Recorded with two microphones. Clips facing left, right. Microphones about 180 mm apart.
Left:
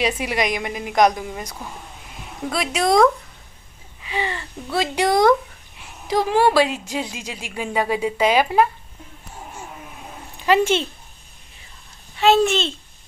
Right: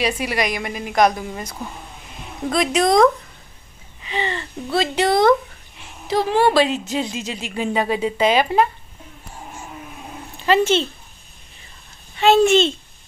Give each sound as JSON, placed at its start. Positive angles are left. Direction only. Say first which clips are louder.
{"t": 0.0, "sound": "a woman's voice", "louder": "even", "side_deg": 20}
{"t": 4.0, "sound": "a woman's voice", "louder": "right 1 dB", "side_deg": 10}
{"t": 10.4, "sound": "a woman's voice", "louder": "right 1 dB", "side_deg": 10}
{"t": 12.2, "sound": "a child's voice", "louder": "right 3 dB", "side_deg": 0}